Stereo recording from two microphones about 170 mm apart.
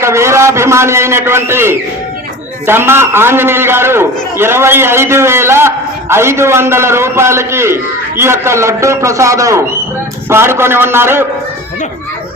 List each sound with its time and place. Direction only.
0.0 s a man's voice: 15° right (ahead or behind)